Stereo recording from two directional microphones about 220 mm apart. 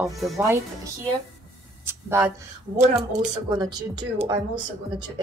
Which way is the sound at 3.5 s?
20° right (ahead or behind).